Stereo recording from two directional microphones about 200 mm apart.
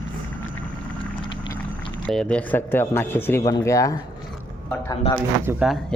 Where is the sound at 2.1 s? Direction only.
5° left (ahead or behind).